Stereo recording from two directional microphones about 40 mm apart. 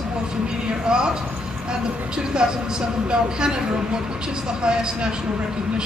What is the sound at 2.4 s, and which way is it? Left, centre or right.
Speech, right.